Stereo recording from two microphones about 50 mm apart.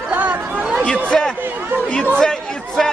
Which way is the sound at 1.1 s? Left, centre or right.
Centre.